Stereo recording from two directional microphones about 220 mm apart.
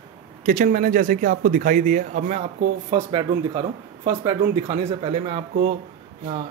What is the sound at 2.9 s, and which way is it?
Speech, 25° right (ahead or behind).